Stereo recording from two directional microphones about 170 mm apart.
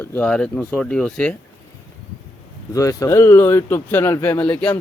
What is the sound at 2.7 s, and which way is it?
Speech, 20° left (ahead or behind).